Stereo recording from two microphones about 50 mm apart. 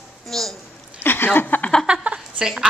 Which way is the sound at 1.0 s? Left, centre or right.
Left.